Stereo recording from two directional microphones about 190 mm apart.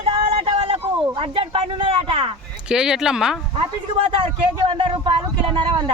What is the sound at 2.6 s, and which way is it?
Speech, 5° right (ahead or behind).